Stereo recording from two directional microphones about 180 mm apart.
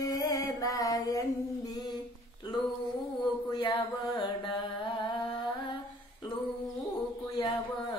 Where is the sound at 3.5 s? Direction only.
25° left (ahead or behind).